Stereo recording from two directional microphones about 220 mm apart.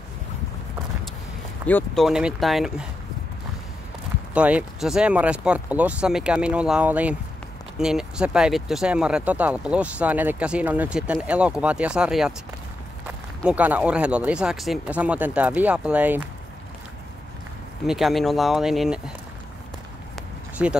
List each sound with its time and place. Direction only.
1.7 s speech: 5° left (ahead or behind)
4.3 s speech: 5° right (ahead or behind)
17.8 s speech: centre (ahead or behind)
20.6 s speech: 5° right (ahead or behind)